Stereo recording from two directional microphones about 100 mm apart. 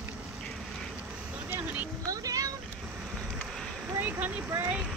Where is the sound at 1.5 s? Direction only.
15° right (ahead or behind).